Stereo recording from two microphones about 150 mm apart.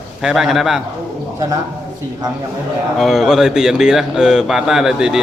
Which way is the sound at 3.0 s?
Centre (ahead or behind).